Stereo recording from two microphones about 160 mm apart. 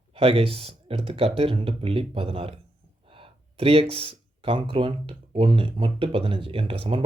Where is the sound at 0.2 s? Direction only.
35° right (ahead or behind).